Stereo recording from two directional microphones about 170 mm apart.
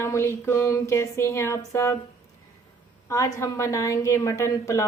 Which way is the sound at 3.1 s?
20° left (ahead or behind).